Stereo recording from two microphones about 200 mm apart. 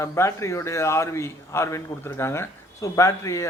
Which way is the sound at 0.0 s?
15° left (ahead or behind).